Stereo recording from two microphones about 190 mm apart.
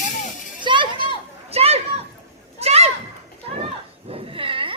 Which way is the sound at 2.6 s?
35° right (ahead or behind).